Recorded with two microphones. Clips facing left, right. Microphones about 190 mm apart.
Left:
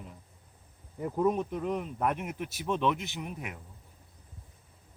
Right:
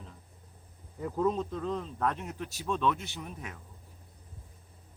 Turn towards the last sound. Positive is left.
turn(degrees=15)  # may be behind; listen again after turning